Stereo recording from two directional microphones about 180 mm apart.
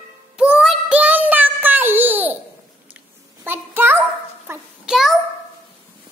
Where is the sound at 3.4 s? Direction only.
10° right (ahead or behind).